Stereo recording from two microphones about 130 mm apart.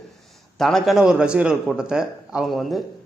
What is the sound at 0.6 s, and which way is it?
A man's voice, 5° left (ahead or behind).